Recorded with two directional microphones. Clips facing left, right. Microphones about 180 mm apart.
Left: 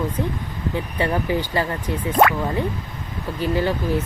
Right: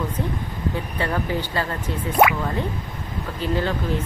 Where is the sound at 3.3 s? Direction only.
15° left (ahead or behind).